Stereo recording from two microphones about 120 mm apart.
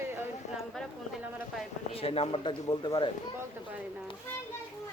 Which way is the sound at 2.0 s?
55° left (ahead or behind).